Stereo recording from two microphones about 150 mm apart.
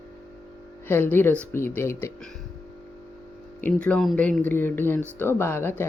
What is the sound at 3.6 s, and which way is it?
Speech, 10° left (ahead or behind).